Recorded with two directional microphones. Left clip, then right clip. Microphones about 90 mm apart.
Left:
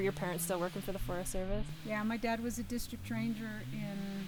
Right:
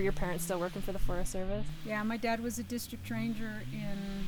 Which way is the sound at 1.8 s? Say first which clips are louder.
Right 2 dB; 25° right (ahead or behind).